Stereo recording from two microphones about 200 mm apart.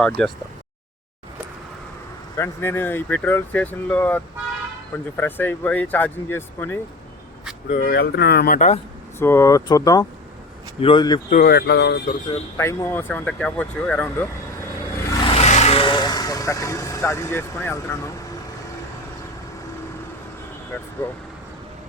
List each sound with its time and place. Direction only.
2.4 s speech: 10° left (ahead or behind)
7.7 s speech: 45° left (ahead or behind)
8.5 s speech: 35° left (ahead or behind)
9.1 s speech: 10° left (ahead or behind)
11.3 s speech: 45° left (ahead or behind)
12.5 s speech: 10° left (ahead or behind)
15.4 s speech: 35° left (ahead or behind); by 18.1 s 10° left (ahead or behind)